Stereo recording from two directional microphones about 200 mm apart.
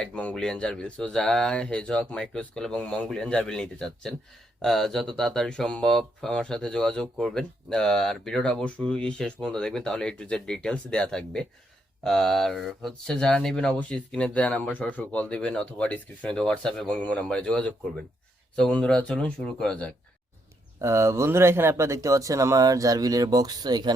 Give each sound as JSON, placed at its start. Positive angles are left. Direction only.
{"t": 0.0, "sound": "speech", "side_deg": 5}
{"t": 20.8, "sound": "speech", "side_deg": -15}